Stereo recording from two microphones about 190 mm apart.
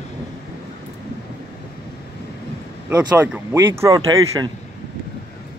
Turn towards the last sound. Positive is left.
turn(degrees=-20)  # may be behind; listen again after turning